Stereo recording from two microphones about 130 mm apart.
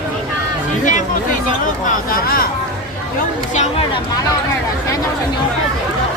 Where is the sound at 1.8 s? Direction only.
90° left.